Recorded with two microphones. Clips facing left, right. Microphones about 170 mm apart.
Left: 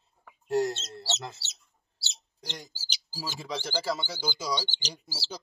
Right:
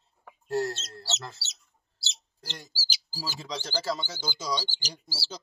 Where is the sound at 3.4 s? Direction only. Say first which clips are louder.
Left 2 dB; 15° left (ahead or behind).